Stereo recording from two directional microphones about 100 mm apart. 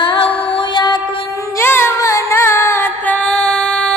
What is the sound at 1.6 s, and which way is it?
Music, 25° left (ahead or behind).